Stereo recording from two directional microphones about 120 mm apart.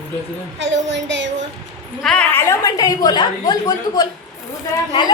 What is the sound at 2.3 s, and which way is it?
A woman's voice, 25° left (ahead or behind).